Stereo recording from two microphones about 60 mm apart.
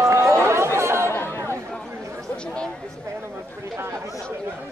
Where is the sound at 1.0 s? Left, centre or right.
Left.